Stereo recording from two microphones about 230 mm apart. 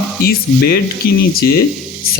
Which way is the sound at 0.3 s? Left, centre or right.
Left.